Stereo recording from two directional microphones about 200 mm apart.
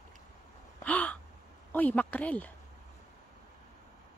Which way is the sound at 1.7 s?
10° left (ahead or behind).